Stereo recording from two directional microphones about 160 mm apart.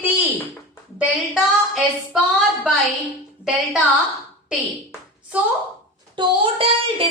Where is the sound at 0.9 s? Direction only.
5° right (ahead or behind).